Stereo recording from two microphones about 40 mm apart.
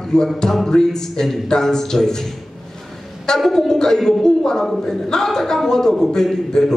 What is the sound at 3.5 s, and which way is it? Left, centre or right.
A man's voice, centre.